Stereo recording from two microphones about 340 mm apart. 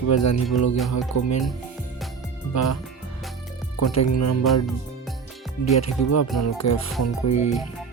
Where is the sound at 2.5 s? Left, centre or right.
Left.